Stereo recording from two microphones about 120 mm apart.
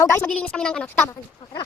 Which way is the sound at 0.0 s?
20° left (ahead or behind).